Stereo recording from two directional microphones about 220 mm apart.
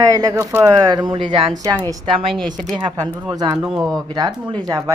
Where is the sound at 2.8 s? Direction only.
15° right (ahead or behind).